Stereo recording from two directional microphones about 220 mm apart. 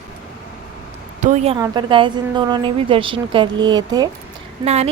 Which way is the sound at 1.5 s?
20° right (ahead or behind).